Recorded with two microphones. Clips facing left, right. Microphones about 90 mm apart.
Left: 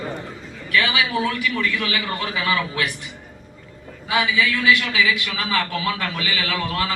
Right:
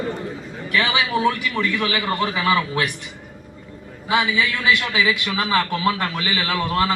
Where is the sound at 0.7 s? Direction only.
25° right (ahead or behind).